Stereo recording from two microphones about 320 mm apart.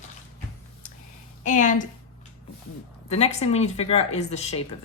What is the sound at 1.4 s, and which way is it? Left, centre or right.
Speech, left.